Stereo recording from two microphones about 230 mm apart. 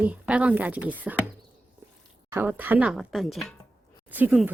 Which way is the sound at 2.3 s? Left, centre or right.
Centre.